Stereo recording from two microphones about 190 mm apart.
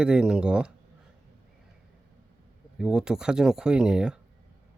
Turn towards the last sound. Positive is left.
turn(degrees=-5)  # may be behind; listen again after turning